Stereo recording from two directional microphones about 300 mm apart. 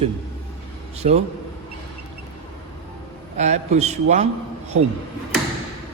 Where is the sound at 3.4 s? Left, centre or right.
Right.